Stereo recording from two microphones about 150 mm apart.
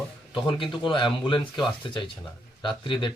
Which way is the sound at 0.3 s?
35° left (ahead or behind).